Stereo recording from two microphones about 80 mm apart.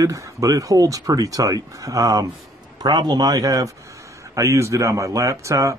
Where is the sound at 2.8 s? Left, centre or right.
Right.